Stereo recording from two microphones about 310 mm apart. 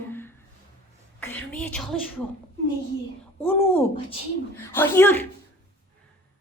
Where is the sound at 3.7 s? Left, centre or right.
Centre.